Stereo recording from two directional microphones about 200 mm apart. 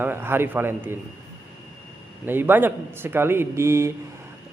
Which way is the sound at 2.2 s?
10° right (ahead or behind).